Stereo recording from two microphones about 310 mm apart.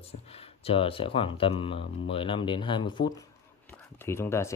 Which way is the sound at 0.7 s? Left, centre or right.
Centre.